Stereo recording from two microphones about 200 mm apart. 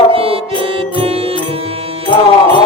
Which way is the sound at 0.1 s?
30° right (ahead or behind).